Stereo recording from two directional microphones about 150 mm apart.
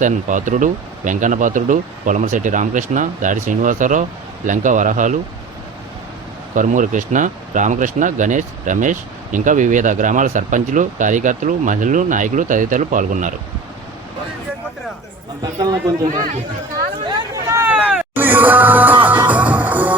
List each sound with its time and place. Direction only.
0.0 s speech: 55° right (ahead or behind)
6.6 s speech: 55° right (ahead or behind)
15.6 s a man's voice: 25° right (ahead or behind)
16.7 s a sound: 25° right (ahead or behind)
18.1 s music: 15° right (ahead or behind)